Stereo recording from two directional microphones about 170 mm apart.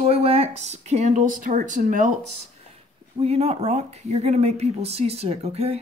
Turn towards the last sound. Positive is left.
turn(degrees=-35)  # may be behind; listen again after turning